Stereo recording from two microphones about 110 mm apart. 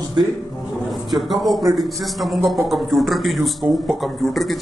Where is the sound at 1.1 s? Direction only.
Centre (ahead or behind).